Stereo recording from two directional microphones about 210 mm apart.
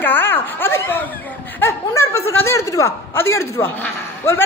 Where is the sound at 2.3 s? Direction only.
10° left (ahead or behind).